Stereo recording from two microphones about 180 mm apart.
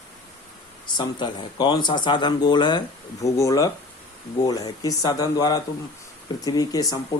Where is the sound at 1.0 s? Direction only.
25° left (ahead or behind).